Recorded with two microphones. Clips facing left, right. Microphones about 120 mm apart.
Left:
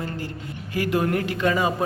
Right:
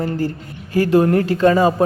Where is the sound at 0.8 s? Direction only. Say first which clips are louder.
Right 9 dB; 30° right (ahead or behind).